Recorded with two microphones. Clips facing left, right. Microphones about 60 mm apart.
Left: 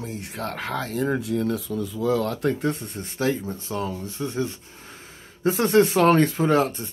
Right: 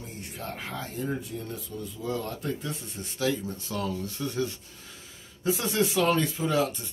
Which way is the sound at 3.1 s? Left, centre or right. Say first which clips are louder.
Left 4 dB; left.